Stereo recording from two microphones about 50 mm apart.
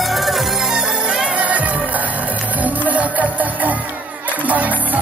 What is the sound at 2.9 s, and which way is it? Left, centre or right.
Music, right.